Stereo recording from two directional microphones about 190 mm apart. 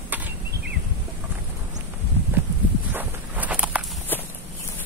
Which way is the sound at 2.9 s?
10° right (ahead or behind).